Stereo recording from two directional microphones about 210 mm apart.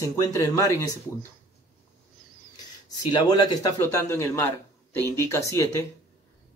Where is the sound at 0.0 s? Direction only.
15° left (ahead or behind).